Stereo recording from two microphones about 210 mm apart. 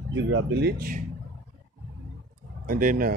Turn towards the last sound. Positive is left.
turn(degrees=-40)  # may be behind; listen again after turning